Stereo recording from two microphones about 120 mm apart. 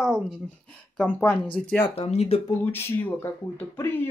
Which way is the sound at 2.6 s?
20° left (ahead or behind).